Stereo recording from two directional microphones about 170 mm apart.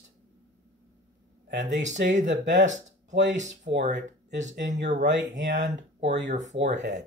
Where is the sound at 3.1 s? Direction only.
90° right.